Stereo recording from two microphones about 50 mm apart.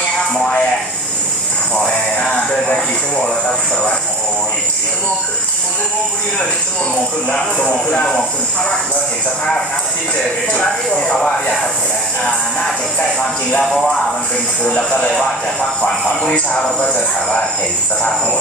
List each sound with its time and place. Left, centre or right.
0.3 s music: centre
2.7 s speech: centre
7.2 s speech: left
11.1 s speech: centre
14.8 s speech: centre